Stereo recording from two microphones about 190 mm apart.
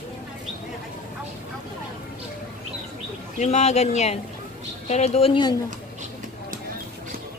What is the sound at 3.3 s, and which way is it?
A woman's voice, 35° left (ahead or behind).